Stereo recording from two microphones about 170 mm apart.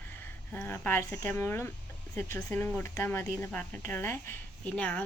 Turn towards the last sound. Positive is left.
turn(degrees=10)  # may be behind; listen again after turning